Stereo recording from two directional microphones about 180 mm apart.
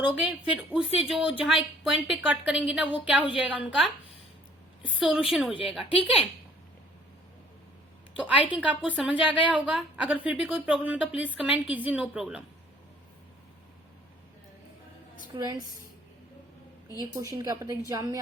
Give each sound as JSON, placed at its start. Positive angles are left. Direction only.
{"t": 0.0, "sound": "a woman's voice", "side_deg": -5}
{"t": 4.9, "sound": "speech", "side_deg": -5}
{"t": 8.2, "sound": "a woman's voice", "side_deg": -5}
{"t": 15.4, "sound": "a woman's voice", "side_deg": -20}
{"t": 17.2, "sound": "a woman's voice", "side_deg": -20}